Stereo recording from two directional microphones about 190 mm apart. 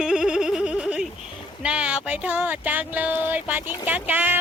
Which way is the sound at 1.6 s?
5° right (ahead or behind).